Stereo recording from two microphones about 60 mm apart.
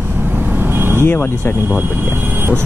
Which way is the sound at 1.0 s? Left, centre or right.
Left.